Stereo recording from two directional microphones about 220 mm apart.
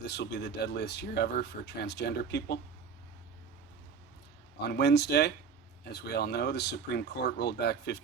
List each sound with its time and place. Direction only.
0.0 s speech: 50° left (ahead or behind)
4.6 s speech: 50° left (ahead or behind)